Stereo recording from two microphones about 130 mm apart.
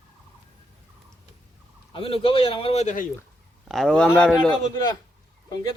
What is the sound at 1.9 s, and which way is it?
A man's voice, 45° left (ahead or behind).